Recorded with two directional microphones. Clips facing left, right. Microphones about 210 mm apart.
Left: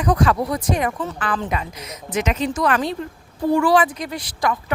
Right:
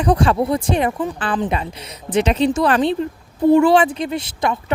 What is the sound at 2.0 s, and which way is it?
A woman's voice, 30° right (ahead or behind).